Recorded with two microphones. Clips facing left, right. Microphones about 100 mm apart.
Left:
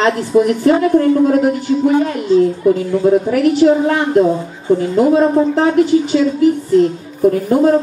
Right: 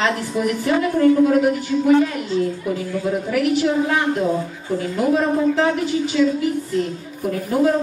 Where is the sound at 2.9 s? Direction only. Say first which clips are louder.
Left 9 dB; 35° left (ahead or behind).